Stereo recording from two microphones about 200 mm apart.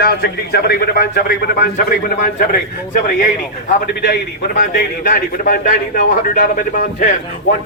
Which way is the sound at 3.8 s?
50° left (ahead or behind).